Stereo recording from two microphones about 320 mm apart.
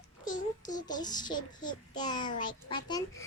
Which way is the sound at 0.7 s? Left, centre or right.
Centre.